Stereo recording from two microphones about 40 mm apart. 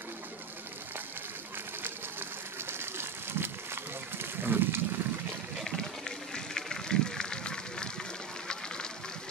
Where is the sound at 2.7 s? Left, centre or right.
Right.